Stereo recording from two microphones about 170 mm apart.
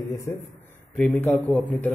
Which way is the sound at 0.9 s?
5° left (ahead or behind).